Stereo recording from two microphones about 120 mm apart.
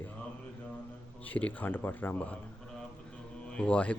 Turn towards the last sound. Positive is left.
turn(degrees=10)  # may be behind; listen again after turning